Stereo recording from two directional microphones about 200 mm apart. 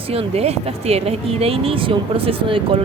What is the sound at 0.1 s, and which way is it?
Speech, 30° right (ahead or behind).